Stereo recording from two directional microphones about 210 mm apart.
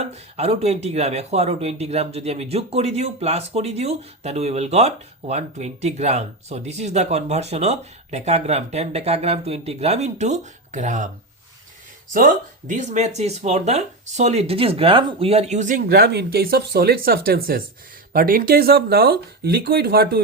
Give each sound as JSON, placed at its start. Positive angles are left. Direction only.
{"t": 0.0, "sound": "speech", "side_deg": -30}
{"t": 12.1, "sound": "speech", "side_deg": -40}